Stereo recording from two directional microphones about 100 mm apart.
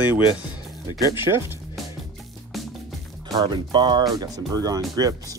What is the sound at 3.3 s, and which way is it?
Speech, 50° right (ahead or behind).